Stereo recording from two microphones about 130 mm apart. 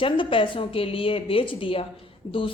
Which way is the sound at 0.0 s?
40° left (ahead or behind).